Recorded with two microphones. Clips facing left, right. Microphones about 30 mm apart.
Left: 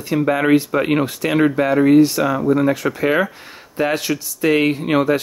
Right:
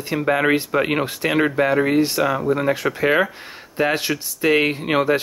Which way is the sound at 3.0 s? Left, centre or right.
Centre.